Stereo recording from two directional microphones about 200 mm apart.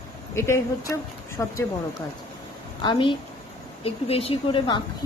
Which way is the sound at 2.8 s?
25° left (ahead or behind).